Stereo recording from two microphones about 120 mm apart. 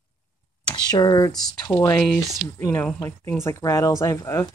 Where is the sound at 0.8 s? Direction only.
35° left (ahead or behind).